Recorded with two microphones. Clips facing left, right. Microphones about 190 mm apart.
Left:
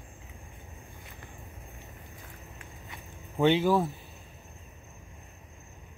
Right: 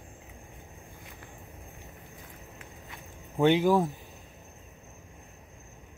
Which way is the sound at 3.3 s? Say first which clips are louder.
Right 1 dB; 15° right (ahead or behind).